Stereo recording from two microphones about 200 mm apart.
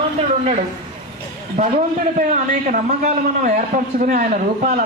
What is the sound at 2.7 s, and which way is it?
A man's voice, 40° right (ahead or behind).